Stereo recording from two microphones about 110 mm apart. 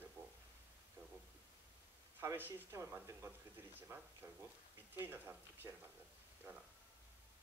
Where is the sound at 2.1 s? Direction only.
20° right (ahead or behind).